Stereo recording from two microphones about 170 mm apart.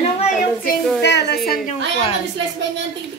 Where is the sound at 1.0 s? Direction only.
80° left.